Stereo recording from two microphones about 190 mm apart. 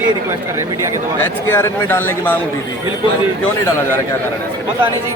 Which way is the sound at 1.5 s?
10° left (ahead or behind).